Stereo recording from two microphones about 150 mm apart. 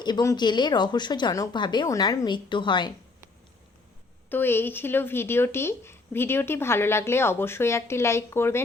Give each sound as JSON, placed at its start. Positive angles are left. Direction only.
{"t": 0.0, "sound": "speech", "side_deg": 25}
{"t": 4.3, "sound": "speech", "side_deg": 15}